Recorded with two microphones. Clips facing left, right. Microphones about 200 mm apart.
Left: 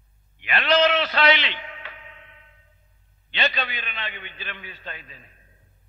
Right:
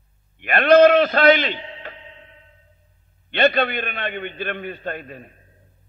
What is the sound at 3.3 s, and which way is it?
A man's voice, 60° right (ahead or behind).